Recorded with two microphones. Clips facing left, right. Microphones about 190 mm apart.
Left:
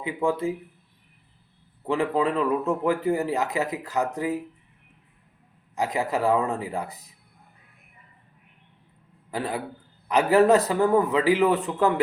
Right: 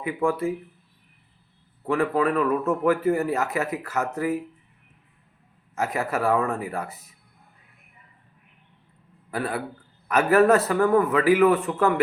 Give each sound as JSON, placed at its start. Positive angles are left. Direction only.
{"t": 0.2, "sound": "speech", "side_deg": 20}
{"t": 1.9, "sound": "speech", "side_deg": 20}
{"t": 5.7, "sound": "speech", "side_deg": 15}
{"t": 10.2, "sound": "speech", "side_deg": 15}